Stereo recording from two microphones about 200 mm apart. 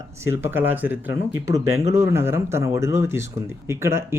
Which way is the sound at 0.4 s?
10° right (ahead or behind).